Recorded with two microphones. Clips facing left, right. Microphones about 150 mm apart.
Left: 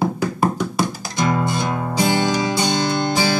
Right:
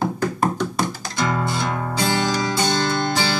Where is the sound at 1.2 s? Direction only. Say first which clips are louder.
Left 3 dB; 15° left (ahead or behind).